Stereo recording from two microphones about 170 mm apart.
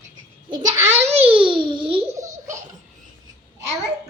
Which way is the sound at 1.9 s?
20° right (ahead or behind).